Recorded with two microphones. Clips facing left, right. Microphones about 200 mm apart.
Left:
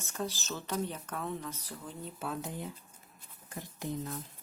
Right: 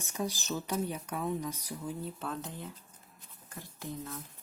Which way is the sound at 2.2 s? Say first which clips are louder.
Left 1 dB; 10° left (ahead or behind).